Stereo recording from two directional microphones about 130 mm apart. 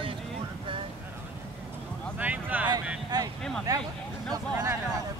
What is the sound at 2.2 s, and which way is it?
Speech, 10° right (ahead or behind).